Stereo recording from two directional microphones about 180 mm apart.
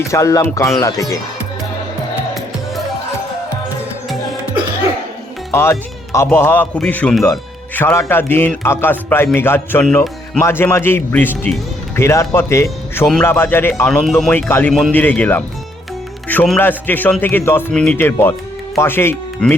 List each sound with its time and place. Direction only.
0.0 s a man's voice: 15° left (ahead or behind)
5.5 s a man's voice: 15° left (ahead or behind)
14.7 s a man's voice: centre (ahead or behind)